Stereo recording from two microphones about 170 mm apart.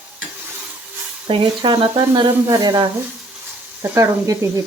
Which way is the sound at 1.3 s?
30° right (ahead or behind).